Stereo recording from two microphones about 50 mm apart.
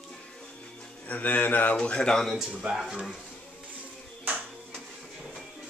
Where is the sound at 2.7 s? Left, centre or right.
Centre.